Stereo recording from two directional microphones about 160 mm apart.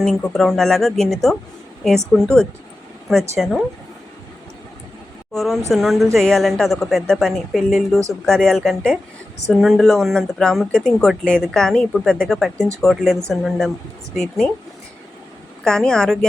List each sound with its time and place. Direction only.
0.0 s speech: 5° left (ahead or behind)
5.3 s speech: centre (ahead or behind)
15.6 s speech: 5° left (ahead or behind)